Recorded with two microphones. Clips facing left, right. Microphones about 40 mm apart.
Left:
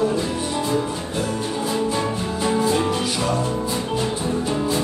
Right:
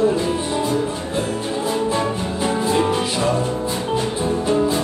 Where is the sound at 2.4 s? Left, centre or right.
Right.